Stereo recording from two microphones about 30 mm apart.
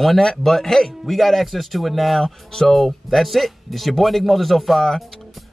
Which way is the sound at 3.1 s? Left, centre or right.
Centre.